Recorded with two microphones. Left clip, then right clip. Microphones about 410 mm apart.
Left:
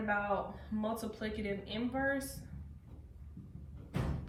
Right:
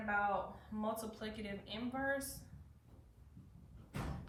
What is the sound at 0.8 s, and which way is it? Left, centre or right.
A woman's voice, centre.